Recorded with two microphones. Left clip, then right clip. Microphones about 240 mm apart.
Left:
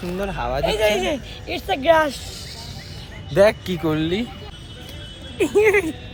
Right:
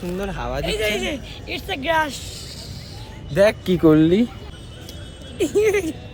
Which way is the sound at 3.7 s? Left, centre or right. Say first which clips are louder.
Right 7 dB; right.